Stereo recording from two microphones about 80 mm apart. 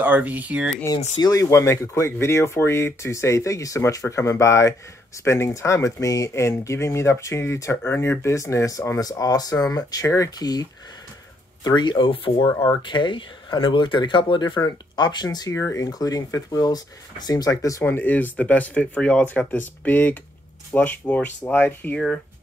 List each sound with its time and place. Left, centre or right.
0.0 s speech: right
1.2 s speech: left
11.6 s speech: left
15.0 s speech: left
15.5 s speech: left
17.8 s speech: left